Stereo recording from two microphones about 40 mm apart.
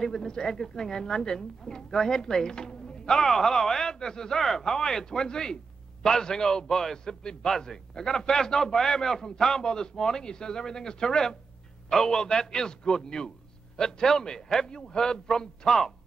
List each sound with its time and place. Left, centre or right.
0.0 s a man's voice: centre